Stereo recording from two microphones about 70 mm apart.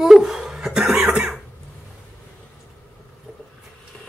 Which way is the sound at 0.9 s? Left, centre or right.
Centre.